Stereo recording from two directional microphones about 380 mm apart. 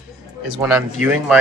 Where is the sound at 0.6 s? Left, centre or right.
Centre.